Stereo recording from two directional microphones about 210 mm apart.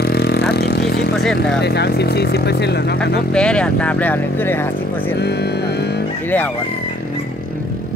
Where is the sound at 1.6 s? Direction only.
50° left (ahead or behind).